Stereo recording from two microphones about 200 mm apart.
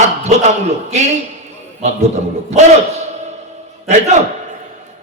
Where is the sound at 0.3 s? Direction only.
35° right (ahead or behind).